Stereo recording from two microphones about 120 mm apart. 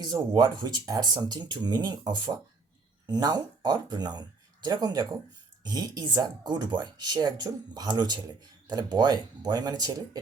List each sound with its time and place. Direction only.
0.0 s speech: 35° right (ahead or behind)